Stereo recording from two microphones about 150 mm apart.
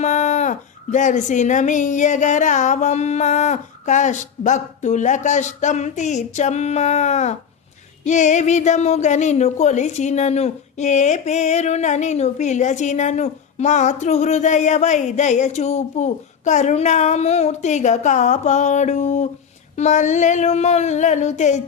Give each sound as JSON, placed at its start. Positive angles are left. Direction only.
{"t": 0.0, "sound": "a woman's voice", "side_deg": 50}